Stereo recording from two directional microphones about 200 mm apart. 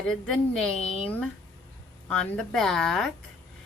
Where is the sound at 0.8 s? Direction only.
30° left (ahead or behind).